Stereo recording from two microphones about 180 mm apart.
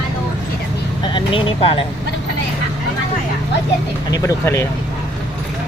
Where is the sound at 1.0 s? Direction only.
30° left (ahead or behind).